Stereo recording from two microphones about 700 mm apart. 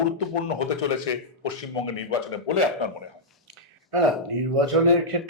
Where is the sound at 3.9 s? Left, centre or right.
Right.